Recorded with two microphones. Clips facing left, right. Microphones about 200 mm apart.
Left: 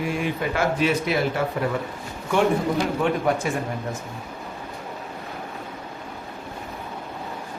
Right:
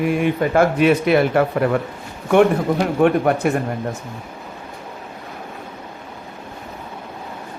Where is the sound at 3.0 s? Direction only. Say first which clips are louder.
Right 7 dB; 60° right (ahead or behind).